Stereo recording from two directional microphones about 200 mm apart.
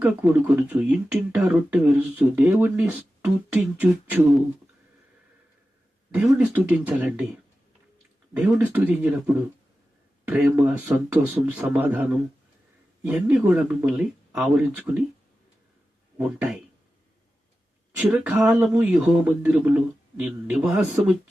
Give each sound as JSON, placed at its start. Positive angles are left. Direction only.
{"t": 0.0, "sound": "speech", "side_deg": -5}
{"t": 6.1, "sound": "speech", "side_deg": -5}
{"t": 8.3, "sound": "speech", "side_deg": -10}
{"t": 16.1, "sound": "speech", "side_deg": -10}
{"t": 17.9, "sound": "speech", "side_deg": -5}